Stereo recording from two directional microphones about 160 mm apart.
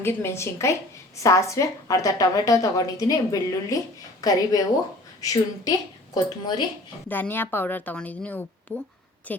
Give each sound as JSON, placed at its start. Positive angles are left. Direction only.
{"t": 0.0, "sound": "a woman's voice", "side_deg": 15}
{"t": 7.1, "sound": "a woman's voice", "side_deg": 10}